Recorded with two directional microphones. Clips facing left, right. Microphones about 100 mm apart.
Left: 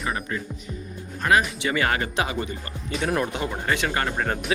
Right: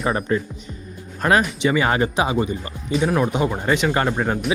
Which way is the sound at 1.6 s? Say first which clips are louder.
Right 5 dB; 20° right (ahead or behind).